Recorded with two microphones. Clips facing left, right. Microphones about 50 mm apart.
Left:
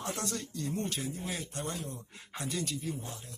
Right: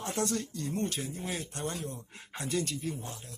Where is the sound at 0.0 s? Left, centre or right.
Right.